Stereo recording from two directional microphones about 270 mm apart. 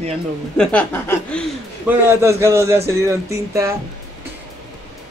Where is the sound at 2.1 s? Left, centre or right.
Centre.